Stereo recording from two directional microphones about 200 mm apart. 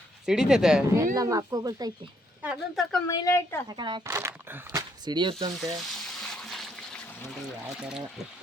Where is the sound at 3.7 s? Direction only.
20° right (ahead or behind).